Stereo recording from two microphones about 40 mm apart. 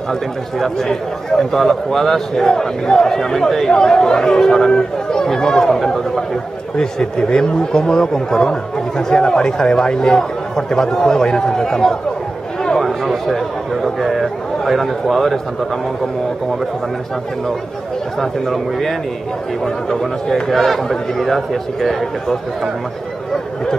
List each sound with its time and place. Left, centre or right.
0.1 s speech: centre
2.4 s speech: centre
12.7 s a man's voice: centre
18.2 s a man's voice: centre
20.2 s speech: centre